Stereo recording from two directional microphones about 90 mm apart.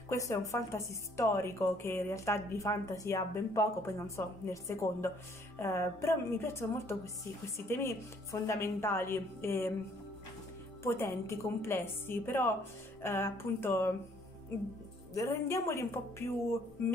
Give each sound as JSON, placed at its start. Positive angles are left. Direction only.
{"t": 0.1, "sound": "a woman's voice", "side_deg": 35}
{"t": 10.8, "sound": "a woman's voice", "side_deg": 30}
{"t": 15.1, "sound": "a woman's voice", "side_deg": 35}